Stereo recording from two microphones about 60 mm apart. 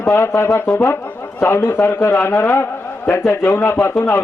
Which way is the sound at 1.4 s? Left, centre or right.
Left.